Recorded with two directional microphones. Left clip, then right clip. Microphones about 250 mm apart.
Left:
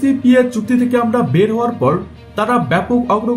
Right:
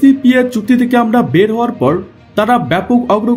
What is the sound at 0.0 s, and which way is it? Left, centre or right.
Speech, right.